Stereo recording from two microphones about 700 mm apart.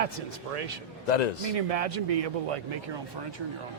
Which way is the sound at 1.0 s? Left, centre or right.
Left.